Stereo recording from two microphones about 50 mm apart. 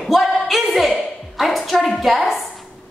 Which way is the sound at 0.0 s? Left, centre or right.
Centre.